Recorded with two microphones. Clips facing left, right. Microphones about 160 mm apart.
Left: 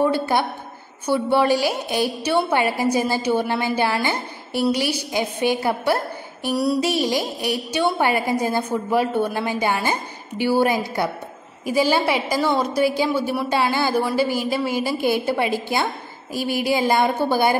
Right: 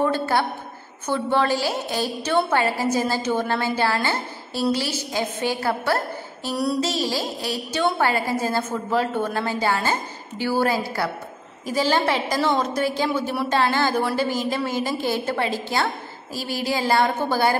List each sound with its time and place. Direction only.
0.0 s a woman's voice: 15° left (ahead or behind)